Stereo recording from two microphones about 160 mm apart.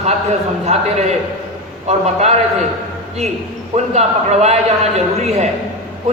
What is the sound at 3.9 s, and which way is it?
A man's voice, 45° right (ahead or behind).